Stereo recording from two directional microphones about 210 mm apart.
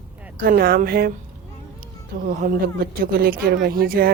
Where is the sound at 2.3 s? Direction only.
40° right (ahead or behind).